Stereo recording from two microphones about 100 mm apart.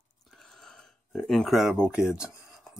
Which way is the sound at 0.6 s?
5° left (ahead or behind).